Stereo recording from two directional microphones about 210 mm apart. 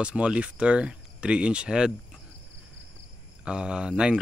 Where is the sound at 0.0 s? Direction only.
5° right (ahead or behind).